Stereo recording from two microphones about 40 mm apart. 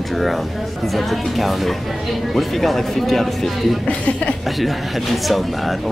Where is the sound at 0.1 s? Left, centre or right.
Centre.